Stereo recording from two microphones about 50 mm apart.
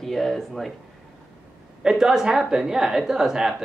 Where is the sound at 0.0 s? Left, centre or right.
Centre.